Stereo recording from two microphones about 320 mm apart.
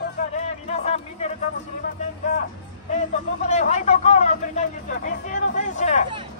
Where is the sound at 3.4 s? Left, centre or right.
Left.